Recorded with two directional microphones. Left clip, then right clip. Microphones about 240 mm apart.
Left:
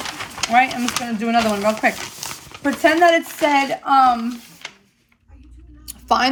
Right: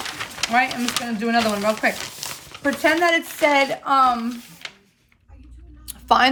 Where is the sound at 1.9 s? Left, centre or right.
Left.